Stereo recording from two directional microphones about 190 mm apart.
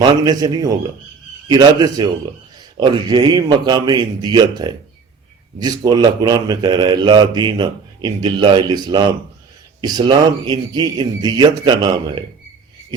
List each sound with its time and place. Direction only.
0.0 s speech: 20° right (ahead or behind)